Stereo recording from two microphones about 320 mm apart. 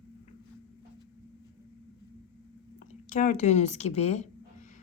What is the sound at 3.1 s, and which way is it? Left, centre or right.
Speech, left.